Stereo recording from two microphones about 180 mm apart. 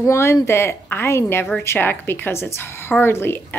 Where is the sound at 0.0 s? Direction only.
15° left (ahead or behind).